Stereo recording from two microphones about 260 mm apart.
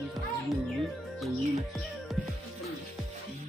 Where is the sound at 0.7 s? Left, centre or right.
Centre.